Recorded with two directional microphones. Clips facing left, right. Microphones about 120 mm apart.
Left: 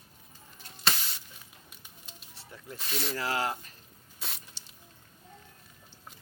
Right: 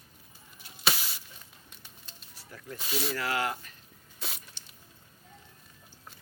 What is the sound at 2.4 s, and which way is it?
Snake, 25° left (ahead or behind).